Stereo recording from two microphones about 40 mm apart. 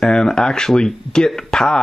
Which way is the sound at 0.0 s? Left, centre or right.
Centre.